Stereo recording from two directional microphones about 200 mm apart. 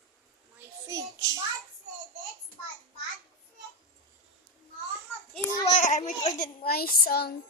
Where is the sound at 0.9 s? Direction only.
15° right (ahead or behind).